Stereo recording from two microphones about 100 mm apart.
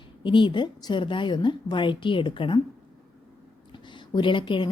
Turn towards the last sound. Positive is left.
turn(degrees=55)  # may be behind; listen again after turning